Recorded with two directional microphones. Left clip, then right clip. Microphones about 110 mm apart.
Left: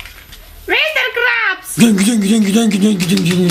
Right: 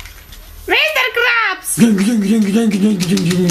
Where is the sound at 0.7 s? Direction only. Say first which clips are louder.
Right 1 dB; 35° right (ahead or behind).